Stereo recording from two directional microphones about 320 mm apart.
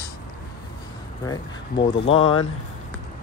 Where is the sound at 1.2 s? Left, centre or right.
Centre.